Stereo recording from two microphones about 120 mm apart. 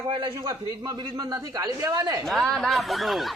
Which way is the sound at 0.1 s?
45° right (ahead or behind).